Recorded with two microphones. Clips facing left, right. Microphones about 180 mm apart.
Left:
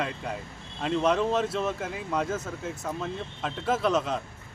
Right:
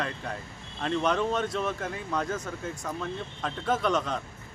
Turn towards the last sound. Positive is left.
turn(degrees=5)  # may be behind; listen again after turning